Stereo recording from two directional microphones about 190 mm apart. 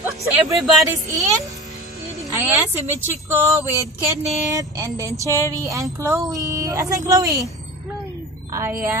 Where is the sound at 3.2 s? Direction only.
15° right (ahead or behind).